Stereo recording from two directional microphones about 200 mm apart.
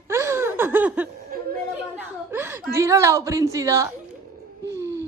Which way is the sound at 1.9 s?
10° right (ahead or behind).